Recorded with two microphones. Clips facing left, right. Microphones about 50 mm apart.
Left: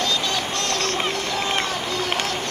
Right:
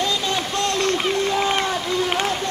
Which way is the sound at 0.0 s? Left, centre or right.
Right.